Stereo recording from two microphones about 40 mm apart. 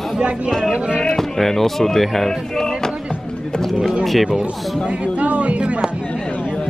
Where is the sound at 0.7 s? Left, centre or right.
Right.